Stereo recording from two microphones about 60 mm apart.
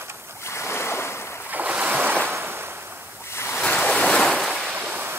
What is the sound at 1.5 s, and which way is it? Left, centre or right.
Ocean, right.